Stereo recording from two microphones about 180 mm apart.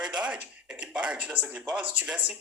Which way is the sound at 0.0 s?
5° right (ahead or behind).